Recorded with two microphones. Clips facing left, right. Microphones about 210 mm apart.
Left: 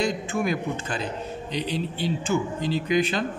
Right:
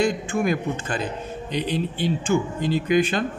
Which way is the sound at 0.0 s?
50° right (ahead or behind).